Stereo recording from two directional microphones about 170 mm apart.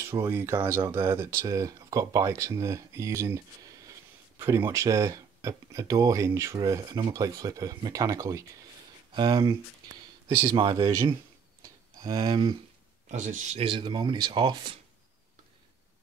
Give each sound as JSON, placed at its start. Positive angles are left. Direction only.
{"t": 0.0, "sound": "speech", "side_deg": -15}
{"t": 13.1, "sound": "speech", "side_deg": -45}
{"t": 13.7, "sound": "speech", "side_deg": -30}